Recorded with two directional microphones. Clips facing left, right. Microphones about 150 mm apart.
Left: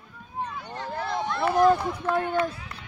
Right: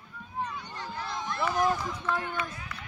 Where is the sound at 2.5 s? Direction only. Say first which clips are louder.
Left 3 dB; 30° left (ahead or behind).